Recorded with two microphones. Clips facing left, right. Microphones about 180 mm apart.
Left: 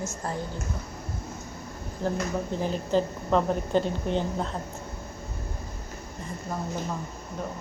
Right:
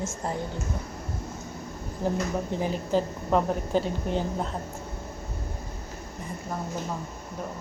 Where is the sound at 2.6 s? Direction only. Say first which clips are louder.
Left 1 dB; 10° right (ahead or behind).